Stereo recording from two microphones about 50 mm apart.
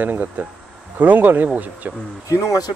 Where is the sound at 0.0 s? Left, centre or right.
Right.